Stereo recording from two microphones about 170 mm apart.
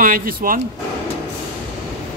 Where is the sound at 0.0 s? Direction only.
55° right (ahead or behind).